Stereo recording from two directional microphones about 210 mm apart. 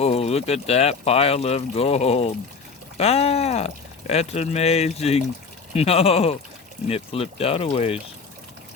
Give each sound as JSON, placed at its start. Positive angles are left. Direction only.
{"t": 0.0, "sound": "speech", "side_deg": 30}